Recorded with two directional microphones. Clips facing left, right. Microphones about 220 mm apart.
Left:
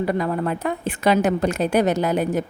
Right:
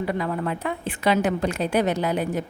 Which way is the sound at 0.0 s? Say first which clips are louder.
Left 4 dB; 45° left (ahead or behind).